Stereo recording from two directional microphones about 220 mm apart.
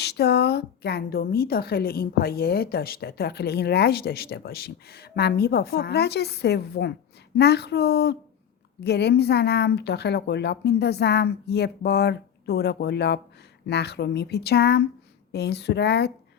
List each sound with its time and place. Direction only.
0.0 s a woman's voice: 50° left (ahead or behind)